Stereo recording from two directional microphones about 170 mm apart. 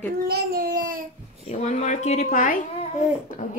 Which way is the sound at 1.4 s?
45° left (ahead or behind).